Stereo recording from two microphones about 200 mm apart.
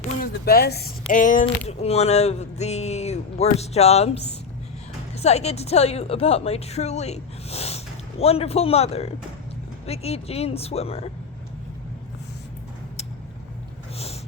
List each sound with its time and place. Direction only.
0.0 s speech: 45° left (ahead or behind)
1.1 s speech: 40° left (ahead or behind)